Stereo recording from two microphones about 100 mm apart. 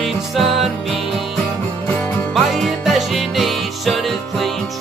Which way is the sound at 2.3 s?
Centre (ahead or behind).